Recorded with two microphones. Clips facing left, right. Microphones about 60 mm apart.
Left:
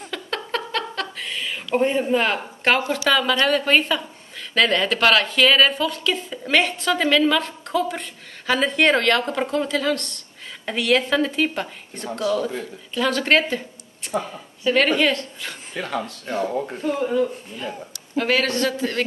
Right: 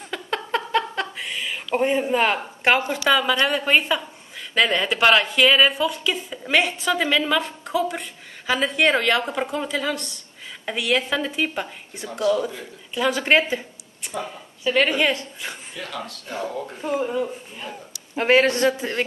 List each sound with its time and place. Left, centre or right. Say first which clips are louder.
0.1 s a sound: right 2 dB; centre
3.1 s a woman's voice: even; centre
14.6 s a woman's voice: left 2 dB; centre
15.7 s speech: left 5 dB; left
16.8 s a woman's voice: left 2 dB; centre